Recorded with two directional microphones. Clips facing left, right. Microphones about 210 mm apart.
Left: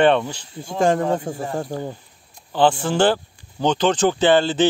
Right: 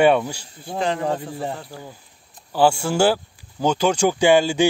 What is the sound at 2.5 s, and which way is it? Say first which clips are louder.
Speech: even; 10° right (ahead or behind).